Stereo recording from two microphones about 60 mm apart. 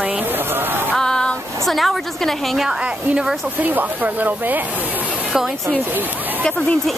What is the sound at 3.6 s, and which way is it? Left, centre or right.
Speech, right.